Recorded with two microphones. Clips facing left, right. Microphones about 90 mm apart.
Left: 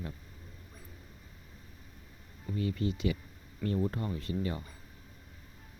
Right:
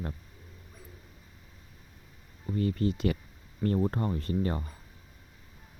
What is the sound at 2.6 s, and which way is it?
Speech, 45° right (ahead or behind).